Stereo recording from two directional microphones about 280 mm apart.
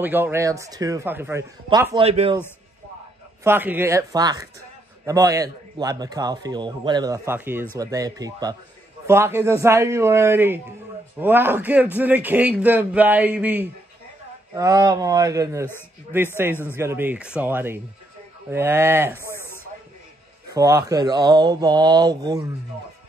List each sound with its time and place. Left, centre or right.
0.0 s a man's voice: centre
3.4 s a man's voice: centre
20.4 s a man's voice: centre